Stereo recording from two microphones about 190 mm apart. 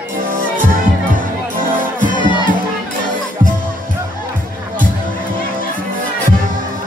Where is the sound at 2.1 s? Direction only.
25° left (ahead or behind).